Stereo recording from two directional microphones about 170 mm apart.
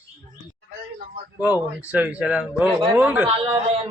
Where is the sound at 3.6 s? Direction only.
35° right (ahead or behind).